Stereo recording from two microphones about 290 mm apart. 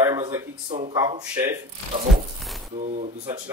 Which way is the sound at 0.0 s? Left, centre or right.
Centre.